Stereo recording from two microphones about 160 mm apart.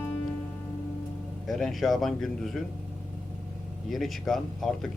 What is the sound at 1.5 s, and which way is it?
Speech, centre (ahead or behind).